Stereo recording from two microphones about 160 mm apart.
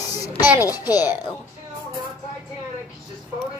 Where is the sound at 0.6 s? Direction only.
25° left (ahead or behind).